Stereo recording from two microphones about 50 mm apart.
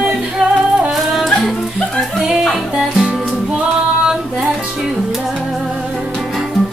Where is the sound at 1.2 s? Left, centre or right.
Centre.